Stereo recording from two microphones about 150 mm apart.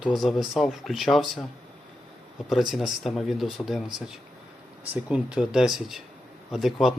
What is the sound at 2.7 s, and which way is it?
Speech, centre (ahead or behind).